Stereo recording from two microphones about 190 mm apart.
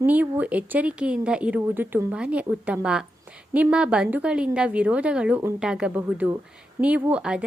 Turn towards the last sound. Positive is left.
turn(degrees=-5)  # may be behind; listen again after turning